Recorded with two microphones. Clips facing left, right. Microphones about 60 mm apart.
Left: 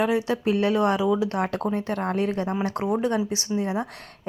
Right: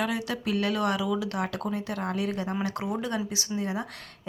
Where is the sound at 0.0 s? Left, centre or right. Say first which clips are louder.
Left 7 dB; left.